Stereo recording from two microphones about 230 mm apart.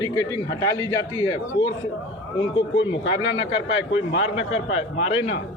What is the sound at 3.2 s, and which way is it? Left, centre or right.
Speech, left.